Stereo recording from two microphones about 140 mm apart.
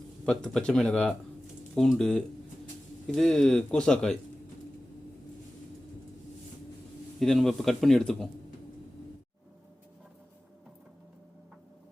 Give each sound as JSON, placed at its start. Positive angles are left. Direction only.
{"t": 0.3, "sound": "speech", "side_deg": 5}
{"t": 7.2, "sound": "speech", "side_deg": 0}